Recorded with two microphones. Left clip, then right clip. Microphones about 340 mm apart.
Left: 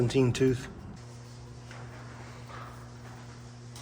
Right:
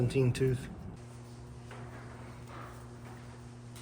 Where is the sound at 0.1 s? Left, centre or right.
Left.